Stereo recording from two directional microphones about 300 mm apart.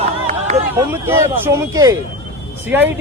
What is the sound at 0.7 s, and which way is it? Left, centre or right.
Speech, centre.